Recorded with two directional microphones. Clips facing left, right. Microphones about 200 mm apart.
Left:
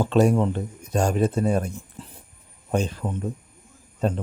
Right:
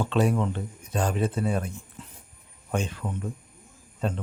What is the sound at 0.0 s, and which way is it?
Speech, 40° left (ahead or behind).